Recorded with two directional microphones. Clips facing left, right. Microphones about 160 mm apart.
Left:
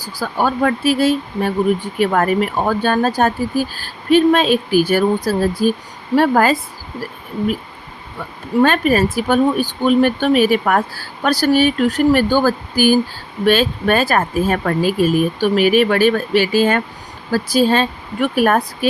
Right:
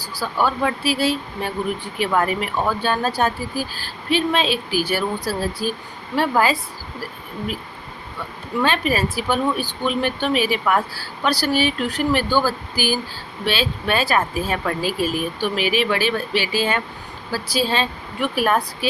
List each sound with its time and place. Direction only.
0.0 s speech: 45° left (ahead or behind)
8.6 s speech: 45° left (ahead or behind)